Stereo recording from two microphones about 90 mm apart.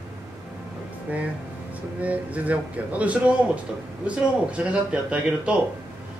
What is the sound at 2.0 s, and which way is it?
A man's voice, 15° right (ahead or behind).